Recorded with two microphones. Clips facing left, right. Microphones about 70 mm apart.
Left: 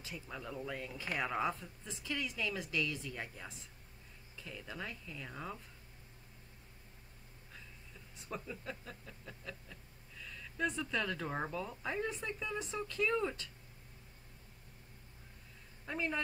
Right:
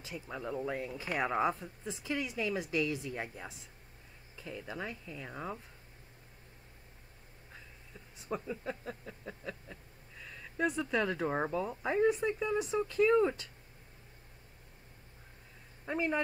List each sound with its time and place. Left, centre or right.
0.3 s speech: right
8.3 s speech: right
15.8 s speech: centre